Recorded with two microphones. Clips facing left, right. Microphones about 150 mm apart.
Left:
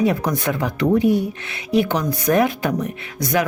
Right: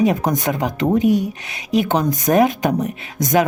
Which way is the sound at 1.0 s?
15° right (ahead or behind).